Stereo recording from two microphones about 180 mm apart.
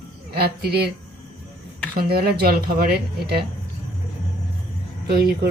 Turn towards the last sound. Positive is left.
turn(degrees=-60)  # may be behind; listen again after turning